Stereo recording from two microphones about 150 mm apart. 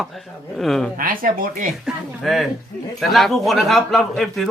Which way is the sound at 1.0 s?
70° right (ahead or behind).